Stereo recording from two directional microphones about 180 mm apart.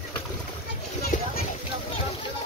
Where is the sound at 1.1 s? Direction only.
45° left (ahead or behind).